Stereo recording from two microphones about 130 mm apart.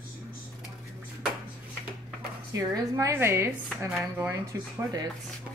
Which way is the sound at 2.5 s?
25° right (ahead or behind).